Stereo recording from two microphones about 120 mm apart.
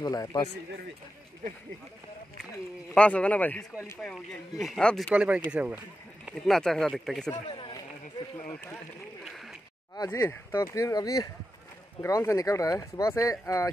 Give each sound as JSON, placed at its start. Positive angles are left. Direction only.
{"t": 0.0, "sound": "speech", "side_deg": 30}
{"t": 2.9, "sound": "speech", "side_deg": 10}
{"t": 4.0, "sound": "speech", "side_deg": 0}
{"t": 5.1, "sound": "speech", "side_deg": -10}
{"t": 6.4, "sound": "speech", "side_deg": 5}
{"t": 7.4, "sound": "a sound", "side_deg": 45}
{"t": 8.5, "sound": "speech", "side_deg": 15}
{"t": 9.2, "sound": "a sound", "side_deg": 0}
{"t": 9.9, "sound": "speech", "side_deg": 30}